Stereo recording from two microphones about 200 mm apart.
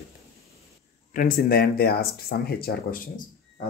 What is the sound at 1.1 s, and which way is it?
Speech, 45° left (ahead or behind).